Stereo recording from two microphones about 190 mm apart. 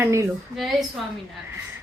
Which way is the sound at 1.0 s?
Centre (ahead or behind).